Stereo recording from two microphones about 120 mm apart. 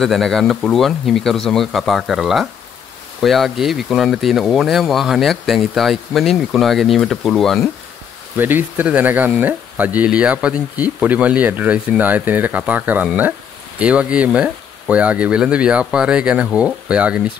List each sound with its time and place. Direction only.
0.0 s speech: 5° left (ahead or behind)
8.4 s speech: 15° right (ahead or behind)